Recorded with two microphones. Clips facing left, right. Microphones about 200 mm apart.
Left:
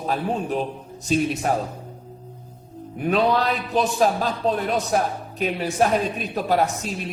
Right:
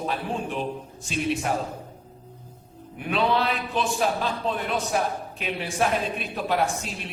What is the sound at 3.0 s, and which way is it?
A man's voice, 40° left (ahead or behind).